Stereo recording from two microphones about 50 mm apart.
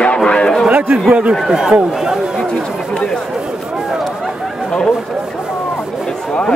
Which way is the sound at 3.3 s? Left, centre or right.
Centre.